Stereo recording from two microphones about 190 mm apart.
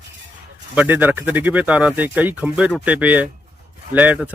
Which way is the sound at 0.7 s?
10° right (ahead or behind).